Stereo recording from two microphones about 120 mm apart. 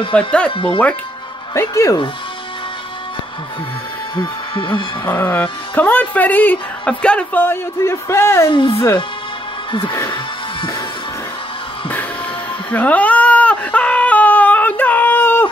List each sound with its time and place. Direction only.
0.1 s speech: 10° left (ahead or behind)
0.5 s speech: 45° left (ahead or behind)
1.5 s speech: 25° left (ahead or behind)
4.2 s speech: 45° left (ahead or behind)
5.0 s speech: 15° left (ahead or behind)
8.5 s speech: 45° left (ahead or behind)
12.7 s whimper: 10° left (ahead or behind)